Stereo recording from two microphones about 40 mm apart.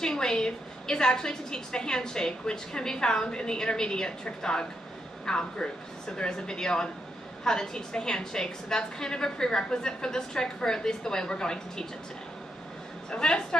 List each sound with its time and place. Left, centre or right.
0.0 s a woman's voice: centre
13.2 s speech: left